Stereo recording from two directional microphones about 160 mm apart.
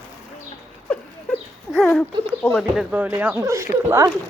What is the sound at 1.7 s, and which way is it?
Speech, 5° left (ahead or behind).